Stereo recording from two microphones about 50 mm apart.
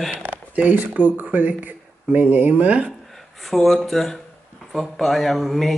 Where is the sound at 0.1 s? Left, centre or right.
Right.